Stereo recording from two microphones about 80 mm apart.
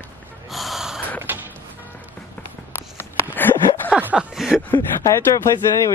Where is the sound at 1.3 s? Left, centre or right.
Right.